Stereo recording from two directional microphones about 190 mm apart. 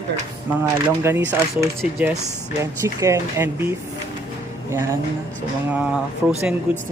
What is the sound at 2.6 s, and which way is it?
Speech, 15° right (ahead or behind).